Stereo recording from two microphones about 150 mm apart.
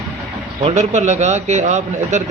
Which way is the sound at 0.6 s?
45° right (ahead or behind).